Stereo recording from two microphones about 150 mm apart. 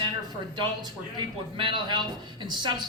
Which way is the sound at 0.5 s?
30° right (ahead or behind).